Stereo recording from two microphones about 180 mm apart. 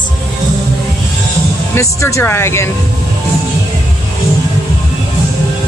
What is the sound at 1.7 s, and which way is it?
Speech, 15° left (ahead or behind).